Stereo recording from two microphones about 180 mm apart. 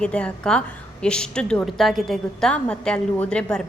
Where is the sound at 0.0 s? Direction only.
5° left (ahead or behind).